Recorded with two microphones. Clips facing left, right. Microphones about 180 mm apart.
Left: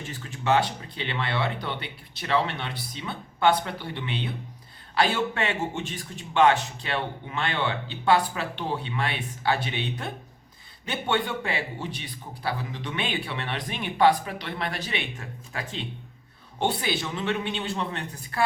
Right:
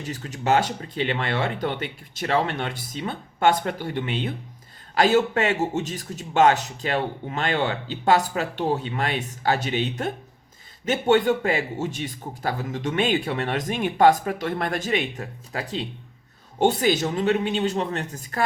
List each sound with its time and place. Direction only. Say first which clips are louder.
0.0 s a man's voice: right 3 dB; 40° right (ahead or behind)